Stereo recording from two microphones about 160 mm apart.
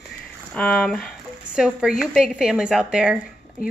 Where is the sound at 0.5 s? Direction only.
5° left (ahead or behind).